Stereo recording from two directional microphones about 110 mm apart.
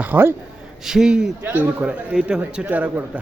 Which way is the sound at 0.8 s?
5° right (ahead or behind).